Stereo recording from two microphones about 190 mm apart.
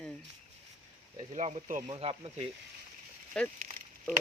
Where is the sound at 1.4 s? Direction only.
35° right (ahead or behind).